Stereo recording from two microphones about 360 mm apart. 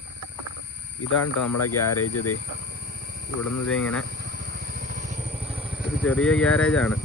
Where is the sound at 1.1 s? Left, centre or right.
Left.